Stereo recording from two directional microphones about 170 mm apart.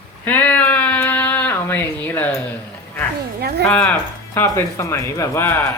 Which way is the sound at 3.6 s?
5° left (ahead or behind).